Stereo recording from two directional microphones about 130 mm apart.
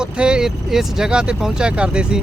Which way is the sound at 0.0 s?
5° right (ahead or behind).